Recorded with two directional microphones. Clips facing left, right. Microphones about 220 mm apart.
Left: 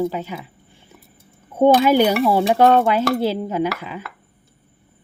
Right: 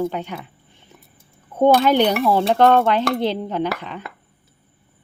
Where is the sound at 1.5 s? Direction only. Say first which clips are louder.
Left 1 dB; 10° left (ahead or behind).